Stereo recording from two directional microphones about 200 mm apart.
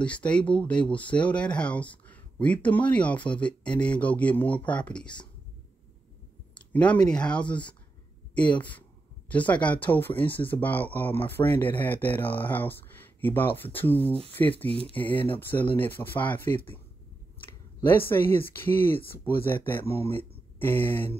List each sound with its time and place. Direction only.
0.0 s speech: 5° left (ahead or behind)
6.5 s speech: 5° left (ahead or behind)
14.7 s speech: 30° right (ahead or behind)
15.0 s speech: 10° left (ahead or behind)
17.8 s speech: 10° left (ahead or behind)